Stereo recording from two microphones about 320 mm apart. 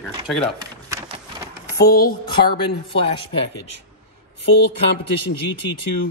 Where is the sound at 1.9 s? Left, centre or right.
Left.